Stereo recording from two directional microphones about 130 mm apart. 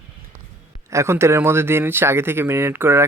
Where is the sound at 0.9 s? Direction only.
20° right (ahead or behind).